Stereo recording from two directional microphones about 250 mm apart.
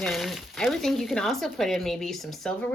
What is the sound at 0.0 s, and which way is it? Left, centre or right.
Speech, centre.